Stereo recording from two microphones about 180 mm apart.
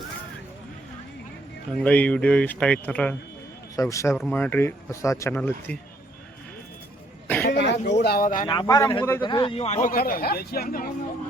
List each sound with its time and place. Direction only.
1.7 s speech: 5° left (ahead or behind)
7.4 s speech: 70° left (ahead or behind)
8.4 s speech: 20° left (ahead or behind)
9.2 s a man's voice: 25° left (ahead or behind)
9.9 s speech: 55° left (ahead or behind)